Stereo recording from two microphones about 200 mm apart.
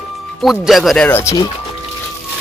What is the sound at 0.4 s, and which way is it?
Speech, centre (ahead or behind).